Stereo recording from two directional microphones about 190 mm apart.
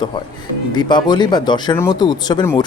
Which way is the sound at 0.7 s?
25° left (ahead or behind).